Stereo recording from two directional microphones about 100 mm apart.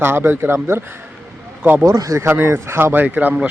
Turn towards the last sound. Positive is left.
turn(degrees=-15)  # may be behind; listen again after turning